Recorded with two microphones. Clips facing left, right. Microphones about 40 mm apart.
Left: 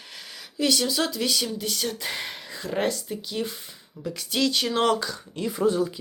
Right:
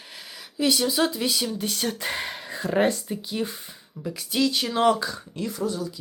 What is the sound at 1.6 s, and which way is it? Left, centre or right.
Speech, right.